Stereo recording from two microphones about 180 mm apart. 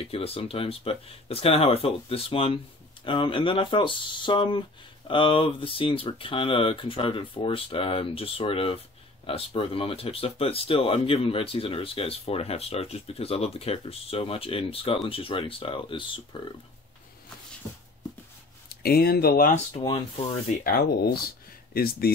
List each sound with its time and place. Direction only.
0.0 s speech: 30° left (ahead or behind)
18.7 s speech: 60° left (ahead or behind)
19.8 s speech: 30° left (ahead or behind)
20.6 s speech: 55° left (ahead or behind)